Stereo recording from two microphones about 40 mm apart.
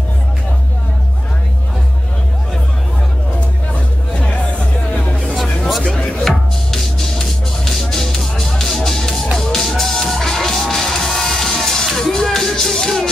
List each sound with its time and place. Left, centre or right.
4.1 s music: left
5.7 s music: centre